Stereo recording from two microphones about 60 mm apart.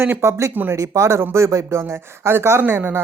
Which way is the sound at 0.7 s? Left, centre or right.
Right.